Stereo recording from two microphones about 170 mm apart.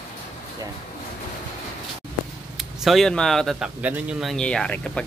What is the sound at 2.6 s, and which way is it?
Speech, centre (ahead or behind).